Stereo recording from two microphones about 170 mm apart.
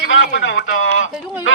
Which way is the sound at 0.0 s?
90° left.